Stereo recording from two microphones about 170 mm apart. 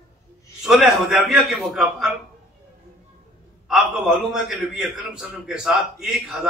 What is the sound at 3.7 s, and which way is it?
A man's voice, 5° right (ahead or behind).